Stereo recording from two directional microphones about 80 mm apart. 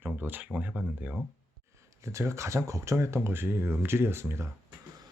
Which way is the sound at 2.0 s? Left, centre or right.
Right.